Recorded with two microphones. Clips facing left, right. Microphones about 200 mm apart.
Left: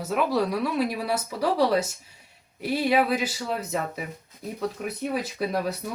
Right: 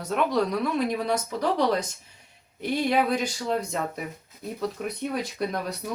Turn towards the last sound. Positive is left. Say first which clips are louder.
# left 2 dB
turn(degrees=5)  # may be behind; listen again after turning